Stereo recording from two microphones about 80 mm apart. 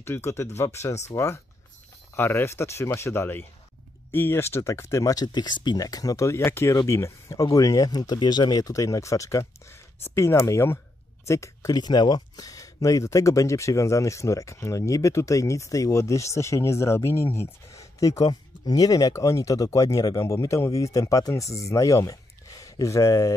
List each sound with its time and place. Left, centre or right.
0.0 s speech: left
5.1 s speech: left
11.7 s speech: left